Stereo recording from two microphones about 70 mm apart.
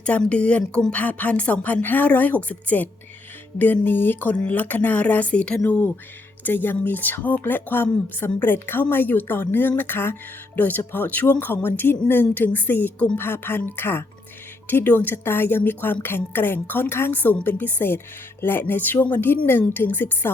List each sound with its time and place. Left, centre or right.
0.0 s a woman's voice: centre